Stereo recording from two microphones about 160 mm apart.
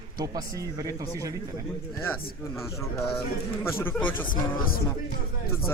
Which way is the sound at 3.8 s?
10° left (ahead or behind).